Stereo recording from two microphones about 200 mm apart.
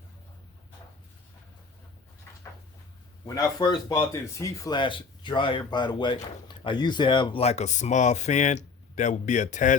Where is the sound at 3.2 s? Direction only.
15° left (ahead or behind).